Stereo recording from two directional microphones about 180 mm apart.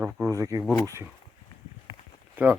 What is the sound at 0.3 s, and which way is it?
Speech, 20° right (ahead or behind).